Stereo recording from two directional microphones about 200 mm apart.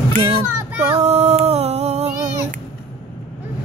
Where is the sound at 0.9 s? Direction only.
30° right (ahead or behind).